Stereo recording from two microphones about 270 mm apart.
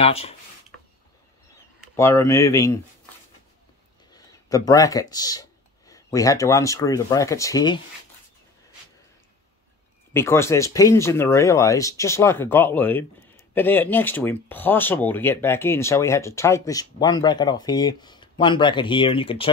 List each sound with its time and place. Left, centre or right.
0.0 s speech: left
2.0 s speech: centre
4.1 s speech: centre
10.1 s speech: centre